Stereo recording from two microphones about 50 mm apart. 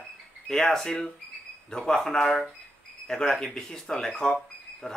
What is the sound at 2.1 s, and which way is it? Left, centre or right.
Speech, centre.